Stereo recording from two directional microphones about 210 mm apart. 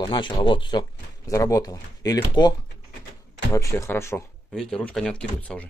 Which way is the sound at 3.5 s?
15° left (ahead or behind).